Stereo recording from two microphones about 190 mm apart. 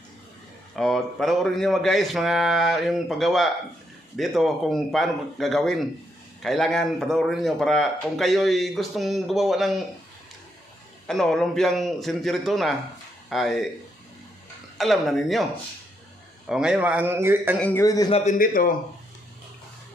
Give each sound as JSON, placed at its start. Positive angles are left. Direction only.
{"t": 0.7, "sound": "a man's voice", "side_deg": 0}
{"t": 11.1, "sound": "a man's voice", "side_deg": 5}
{"t": 14.8, "sound": "a man's voice", "side_deg": 0}
{"t": 16.4, "sound": "speech", "side_deg": -5}
{"t": 17.6, "sound": "a man's voice", "side_deg": 10}
{"t": 18.1, "sound": "a man's voice", "side_deg": 40}